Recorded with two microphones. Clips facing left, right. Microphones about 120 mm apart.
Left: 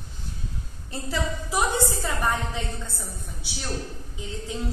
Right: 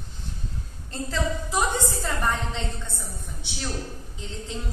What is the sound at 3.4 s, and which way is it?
Speech, 5° left (ahead or behind).